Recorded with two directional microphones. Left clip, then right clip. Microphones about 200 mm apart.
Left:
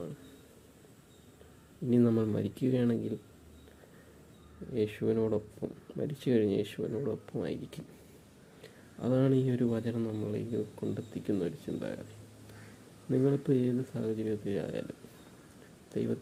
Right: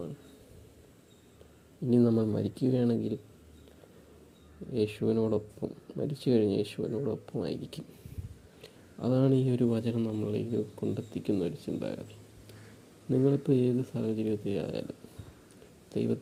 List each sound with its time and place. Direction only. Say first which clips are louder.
1.9 s speech: right 2 dB; 10° right (ahead or behind)
4.7 s a man's voice: right 2 dB; 20° right (ahead or behind)
13.1 s a man's voice: right 2 dB; 20° right (ahead or behind)
15.9 s speech: right 3 dB; 20° right (ahead or behind)